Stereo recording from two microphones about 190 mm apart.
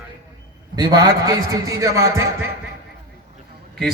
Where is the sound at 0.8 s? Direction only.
20° right (ahead or behind).